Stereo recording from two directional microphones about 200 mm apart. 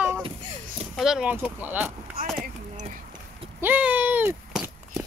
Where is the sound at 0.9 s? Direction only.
Centre (ahead or behind).